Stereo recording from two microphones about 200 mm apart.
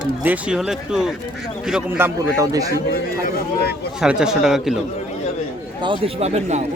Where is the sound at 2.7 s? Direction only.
50° left (ahead or behind).